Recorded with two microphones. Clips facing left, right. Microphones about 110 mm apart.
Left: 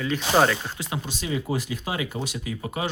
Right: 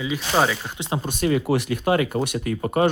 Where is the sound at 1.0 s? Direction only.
55° right (ahead or behind).